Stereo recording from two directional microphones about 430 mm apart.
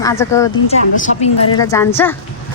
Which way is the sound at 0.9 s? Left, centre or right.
Centre.